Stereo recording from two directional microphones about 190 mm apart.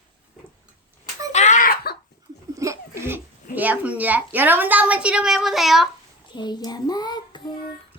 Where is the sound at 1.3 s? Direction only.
40° left (ahead or behind).